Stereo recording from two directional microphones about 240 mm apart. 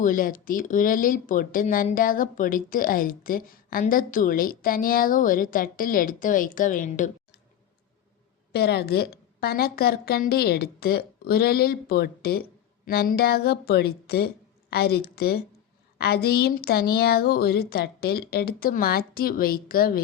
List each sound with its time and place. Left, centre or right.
0.0 s speech: left
8.5 s speech: left